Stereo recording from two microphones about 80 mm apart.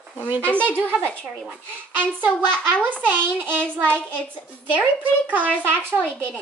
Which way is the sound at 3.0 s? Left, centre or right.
Right.